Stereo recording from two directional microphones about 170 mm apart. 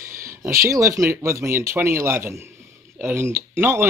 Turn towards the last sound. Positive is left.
turn(degrees=-15)  # may be behind; listen again after turning